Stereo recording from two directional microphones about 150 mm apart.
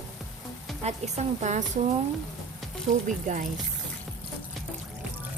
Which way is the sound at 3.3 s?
60° right (ahead or behind).